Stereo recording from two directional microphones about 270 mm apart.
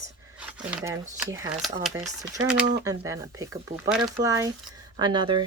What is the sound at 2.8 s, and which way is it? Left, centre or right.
Speech, centre.